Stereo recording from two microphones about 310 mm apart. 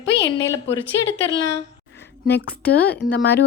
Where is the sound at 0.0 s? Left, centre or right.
Left.